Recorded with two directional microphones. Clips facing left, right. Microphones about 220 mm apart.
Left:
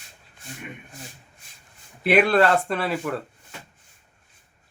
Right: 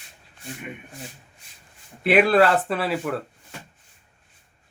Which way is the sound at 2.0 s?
Centre (ahead or behind).